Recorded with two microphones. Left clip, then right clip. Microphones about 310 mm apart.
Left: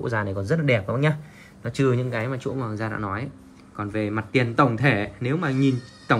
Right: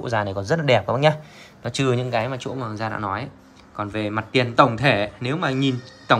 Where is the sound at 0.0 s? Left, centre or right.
Centre.